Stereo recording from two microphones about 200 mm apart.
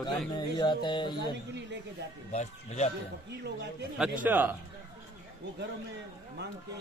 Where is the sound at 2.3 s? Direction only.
35° left (ahead or behind).